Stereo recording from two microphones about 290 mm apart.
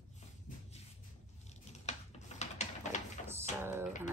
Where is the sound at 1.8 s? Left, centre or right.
Left.